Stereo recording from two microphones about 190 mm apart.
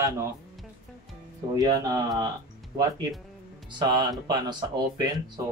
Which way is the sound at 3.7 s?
20° right (ahead or behind).